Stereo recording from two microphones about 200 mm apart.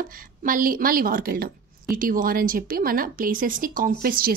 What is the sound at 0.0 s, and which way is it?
Speech, 45° right (ahead or behind).